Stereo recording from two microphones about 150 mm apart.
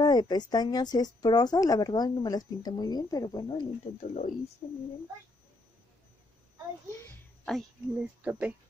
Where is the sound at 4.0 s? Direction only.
55° left (ahead or behind).